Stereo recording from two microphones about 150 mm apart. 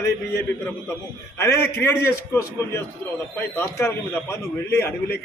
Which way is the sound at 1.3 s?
15° left (ahead or behind).